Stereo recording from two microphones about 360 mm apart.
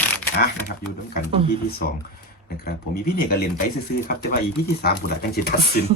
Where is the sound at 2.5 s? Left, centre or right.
Left.